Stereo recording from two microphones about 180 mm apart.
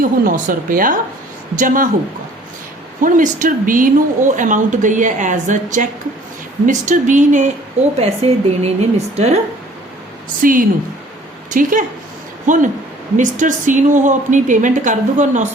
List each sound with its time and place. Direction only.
0.0 s a woman's voice: 45° right (ahead or behind)
3.0 s a woman's voice: 45° right (ahead or behind)
10.4 s a woman's voice: 50° right (ahead or behind)